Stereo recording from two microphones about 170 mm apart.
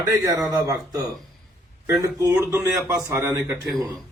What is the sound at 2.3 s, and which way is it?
A man's voice, 15° right (ahead or behind).